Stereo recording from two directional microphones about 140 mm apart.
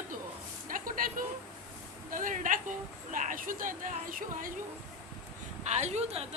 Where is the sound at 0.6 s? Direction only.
75° right (ahead or behind).